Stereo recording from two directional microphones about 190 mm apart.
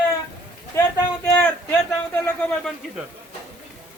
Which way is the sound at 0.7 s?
15° left (ahead or behind).